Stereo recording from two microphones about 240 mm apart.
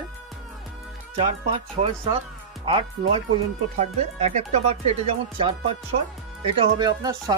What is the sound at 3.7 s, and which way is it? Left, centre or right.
Speech, right.